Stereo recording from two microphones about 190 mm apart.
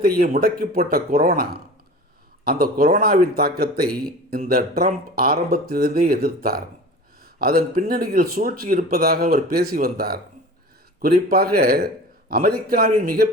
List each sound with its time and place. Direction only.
0.0 s speech: 50° right (ahead or behind)